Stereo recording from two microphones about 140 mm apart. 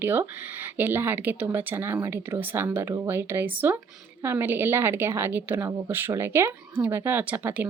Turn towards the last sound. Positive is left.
turn(degrees=-10)  # may be behind; listen again after turning